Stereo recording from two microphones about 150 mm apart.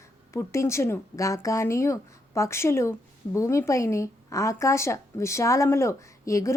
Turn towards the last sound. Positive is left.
turn(degrees=20)  # may be behind; listen again after turning